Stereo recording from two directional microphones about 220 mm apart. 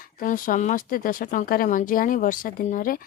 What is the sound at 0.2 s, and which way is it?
A woman's voice, 40° left (ahead or behind).